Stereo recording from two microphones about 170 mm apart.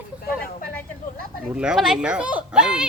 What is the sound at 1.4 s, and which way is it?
Speech, 5° right (ahead or behind).